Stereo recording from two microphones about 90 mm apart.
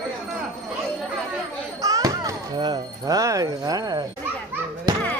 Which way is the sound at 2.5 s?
50° right (ahead or behind).